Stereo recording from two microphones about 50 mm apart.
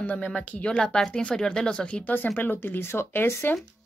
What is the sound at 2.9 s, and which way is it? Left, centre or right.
Speech, left.